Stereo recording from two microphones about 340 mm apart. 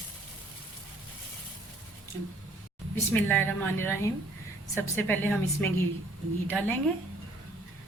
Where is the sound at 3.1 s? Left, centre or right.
Centre.